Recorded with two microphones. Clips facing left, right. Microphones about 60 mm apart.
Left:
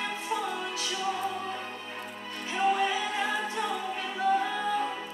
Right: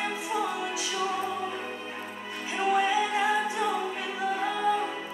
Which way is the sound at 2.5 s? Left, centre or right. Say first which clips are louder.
Right 2 dB; centre.